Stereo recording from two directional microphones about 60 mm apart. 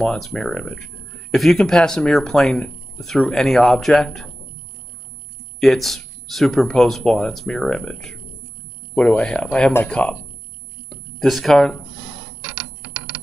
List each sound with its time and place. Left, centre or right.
0.0 s speech: centre
5.6 s speech: centre
10.9 s a sound: centre